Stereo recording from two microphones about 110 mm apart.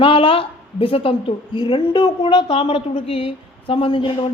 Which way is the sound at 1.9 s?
55° left (ahead or behind).